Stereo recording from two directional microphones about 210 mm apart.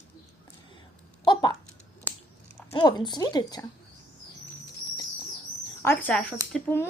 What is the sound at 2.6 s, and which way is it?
Speech, 20° left (ahead or behind).